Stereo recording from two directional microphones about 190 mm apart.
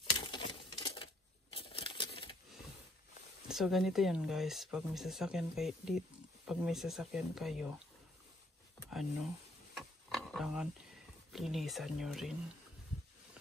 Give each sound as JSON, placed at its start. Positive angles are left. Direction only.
{"t": 0.1, "sound": "a sound", "side_deg": 25}
{"t": 3.4, "sound": "speech", "side_deg": 0}
{"t": 9.8, "sound": "pig", "side_deg": 0}
{"t": 11.3, "sound": "speech", "side_deg": 0}